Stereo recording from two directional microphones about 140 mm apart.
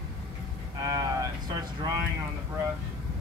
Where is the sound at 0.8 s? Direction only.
25° right (ahead or behind).